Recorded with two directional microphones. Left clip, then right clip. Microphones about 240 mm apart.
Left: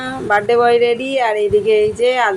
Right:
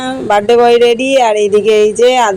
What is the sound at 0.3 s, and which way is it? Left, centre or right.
Speech, right.